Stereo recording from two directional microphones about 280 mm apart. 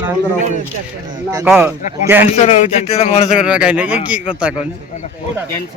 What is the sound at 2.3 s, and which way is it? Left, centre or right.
A man's voice, left.